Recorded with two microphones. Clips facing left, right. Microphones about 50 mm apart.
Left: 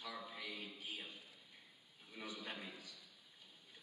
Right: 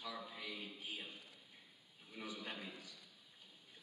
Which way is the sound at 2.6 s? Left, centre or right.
Right.